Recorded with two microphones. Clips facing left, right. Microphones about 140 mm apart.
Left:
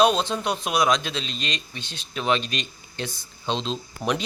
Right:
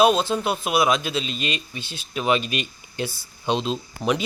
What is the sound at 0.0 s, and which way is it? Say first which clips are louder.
A man's voice: right 2 dB; 5° right (ahead or behind).